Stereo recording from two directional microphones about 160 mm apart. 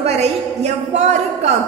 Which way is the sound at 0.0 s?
40° right (ahead or behind).